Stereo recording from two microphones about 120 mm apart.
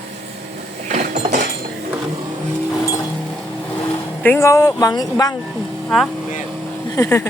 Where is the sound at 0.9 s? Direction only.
65° right (ahead or behind).